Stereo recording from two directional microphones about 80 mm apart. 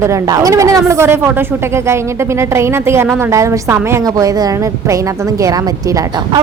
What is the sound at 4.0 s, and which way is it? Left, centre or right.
A woman's voice, right.